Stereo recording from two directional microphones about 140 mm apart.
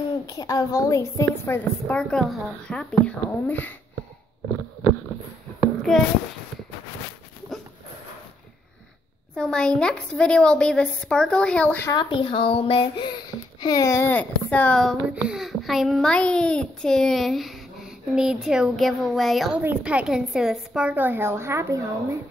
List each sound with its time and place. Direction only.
0.3 s a woman's voice: 25° left (ahead or behind)
5.8 s a sound: 5° left (ahead or behind)
9.3 s a woman's voice: 5° left (ahead or behind)
11.9 s speech: 35° left (ahead or behind)
13.6 s a woman's voice: 25° left (ahead or behind); by 15.0 s 5° left (ahead or behind)
15.0 s a child's voice: 5° right (ahead or behind)